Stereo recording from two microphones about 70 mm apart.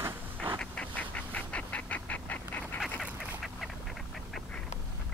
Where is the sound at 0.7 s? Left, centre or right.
Left.